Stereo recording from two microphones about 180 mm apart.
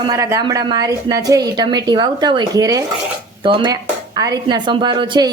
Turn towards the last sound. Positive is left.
turn(degrees=-25)  # may be behind; listen again after turning